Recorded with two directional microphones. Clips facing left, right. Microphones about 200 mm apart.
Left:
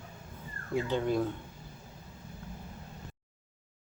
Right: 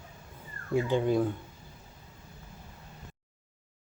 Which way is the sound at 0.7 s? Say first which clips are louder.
Right 3 dB; 15° right (ahead or behind).